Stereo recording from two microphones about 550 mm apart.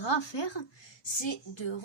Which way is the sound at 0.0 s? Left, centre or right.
Left.